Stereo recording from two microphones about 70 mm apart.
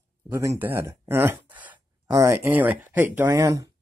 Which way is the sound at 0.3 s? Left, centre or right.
Right.